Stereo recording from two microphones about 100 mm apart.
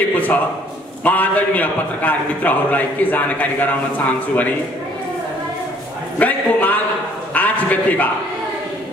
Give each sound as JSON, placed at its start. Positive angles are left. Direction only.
{"t": 0.1, "sound": "a man's voice", "side_deg": 15}
{"t": 6.1, "sound": "a man's voice", "side_deg": 15}
{"t": 7.3, "sound": "a sound", "side_deg": 15}